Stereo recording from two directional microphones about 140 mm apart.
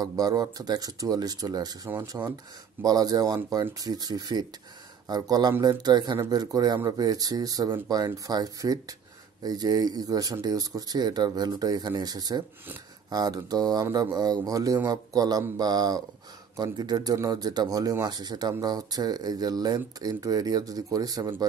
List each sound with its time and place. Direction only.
0.0 s speech: 25° right (ahead or behind)
1.9 s speech: 15° right (ahead or behind)
2.8 s speech: 25° right (ahead or behind)